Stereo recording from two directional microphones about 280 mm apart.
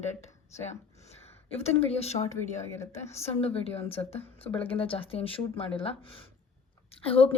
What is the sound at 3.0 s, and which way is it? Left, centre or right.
Speech, left.